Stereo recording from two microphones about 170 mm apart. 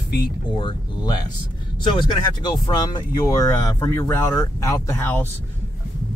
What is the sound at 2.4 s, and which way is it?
Speech, 25° left (ahead or behind).